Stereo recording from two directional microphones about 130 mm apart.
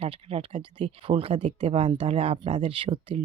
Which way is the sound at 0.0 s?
50° right (ahead or behind).